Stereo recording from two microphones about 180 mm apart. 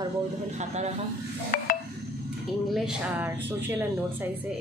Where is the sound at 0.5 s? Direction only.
40° right (ahead or behind).